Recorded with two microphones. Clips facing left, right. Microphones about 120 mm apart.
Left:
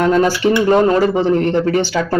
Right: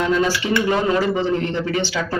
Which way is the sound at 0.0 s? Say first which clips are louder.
Left 6 dB; 45° left (ahead or behind).